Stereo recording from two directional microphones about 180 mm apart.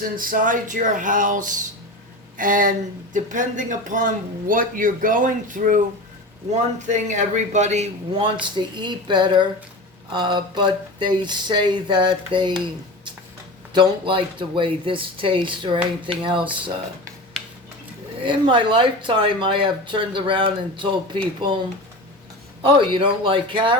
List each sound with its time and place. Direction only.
0.0 s a man's voice: 50° right (ahead or behind)
8.5 s speech: 25° right (ahead or behind)
13.7 s speech: 30° right (ahead or behind)
18.3 s speech: 25° right (ahead or behind)
22.6 s speech: 30° right (ahead or behind)